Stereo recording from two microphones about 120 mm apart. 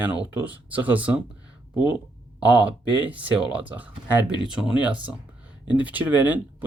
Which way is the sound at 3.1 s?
10° right (ahead or behind).